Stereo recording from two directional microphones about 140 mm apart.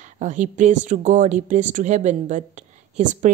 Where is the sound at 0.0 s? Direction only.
60° right (ahead or behind).